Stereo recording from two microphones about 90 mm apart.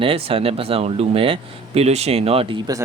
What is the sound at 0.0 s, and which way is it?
Speech, 90° right.